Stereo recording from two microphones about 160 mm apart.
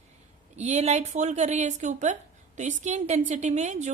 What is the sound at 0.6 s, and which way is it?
A woman's voice, 45° right (ahead or behind).